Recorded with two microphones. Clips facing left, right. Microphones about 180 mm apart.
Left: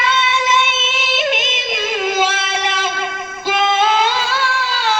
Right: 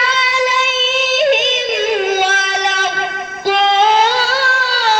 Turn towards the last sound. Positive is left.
turn(degrees=-40)  # may be behind; listen again after turning